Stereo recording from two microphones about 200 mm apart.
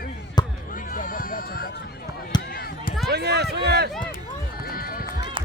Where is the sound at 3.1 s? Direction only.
55° right (ahead or behind).